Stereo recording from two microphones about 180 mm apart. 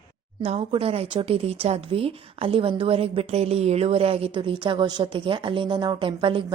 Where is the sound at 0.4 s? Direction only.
35° right (ahead or behind).